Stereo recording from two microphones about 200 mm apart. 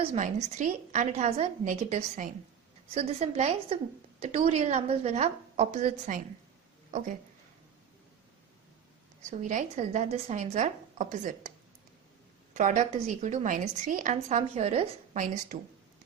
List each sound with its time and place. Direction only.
0.0 s a woman's voice: 35° right (ahead or behind)
9.4 s a woman's voice: 35° right (ahead or behind)
12.5 s a woman's voice: 35° right (ahead or behind)